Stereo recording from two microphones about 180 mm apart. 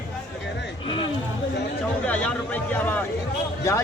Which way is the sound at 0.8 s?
30° left (ahead or behind).